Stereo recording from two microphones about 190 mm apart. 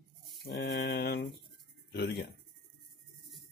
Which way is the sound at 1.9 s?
60° left (ahead or behind).